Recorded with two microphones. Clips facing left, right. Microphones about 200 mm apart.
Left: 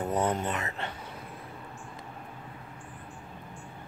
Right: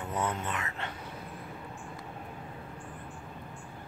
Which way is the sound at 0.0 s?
35° left (ahead or behind).